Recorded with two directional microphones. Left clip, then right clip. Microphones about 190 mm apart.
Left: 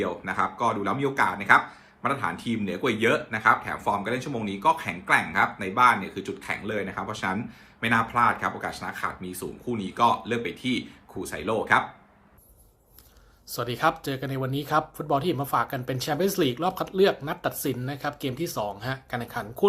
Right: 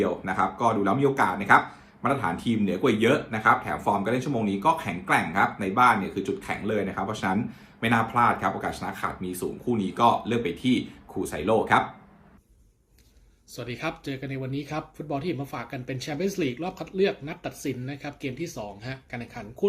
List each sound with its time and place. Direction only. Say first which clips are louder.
0.3 s speech: left 1 dB; centre (ahead or behind)
13.6 s speech: left 8 dB; 15° right (ahead or behind)